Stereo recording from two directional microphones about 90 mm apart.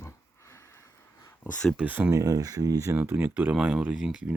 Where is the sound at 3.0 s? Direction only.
25° right (ahead or behind); by 4.3 s 10° right (ahead or behind).